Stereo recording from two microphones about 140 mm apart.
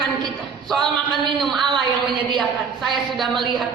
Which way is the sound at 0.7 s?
5° left (ahead or behind).